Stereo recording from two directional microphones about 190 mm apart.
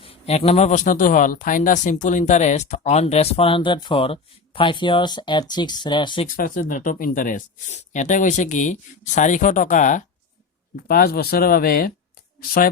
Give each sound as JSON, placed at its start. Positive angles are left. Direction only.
{"t": 0.0, "sound": "speech", "side_deg": 30}
{"t": 6.2, "sound": "speech", "side_deg": 45}
{"t": 10.8, "sound": "speech", "side_deg": 55}